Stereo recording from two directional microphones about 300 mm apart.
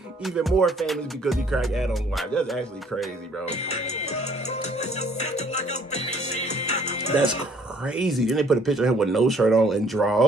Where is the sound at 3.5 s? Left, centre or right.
Left.